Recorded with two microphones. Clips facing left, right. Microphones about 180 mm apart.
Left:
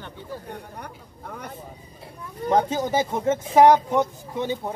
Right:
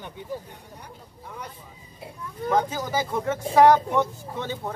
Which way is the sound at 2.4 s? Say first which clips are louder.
Left 3 dB; 25° left (ahead or behind).